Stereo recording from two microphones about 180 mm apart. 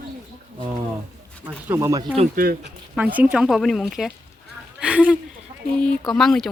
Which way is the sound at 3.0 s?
10° right (ahead or behind).